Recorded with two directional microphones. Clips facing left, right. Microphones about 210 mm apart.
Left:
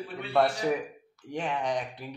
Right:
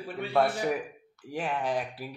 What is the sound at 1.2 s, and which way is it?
Speech, 5° right (ahead or behind).